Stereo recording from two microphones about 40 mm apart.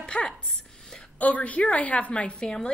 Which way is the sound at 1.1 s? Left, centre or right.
Left.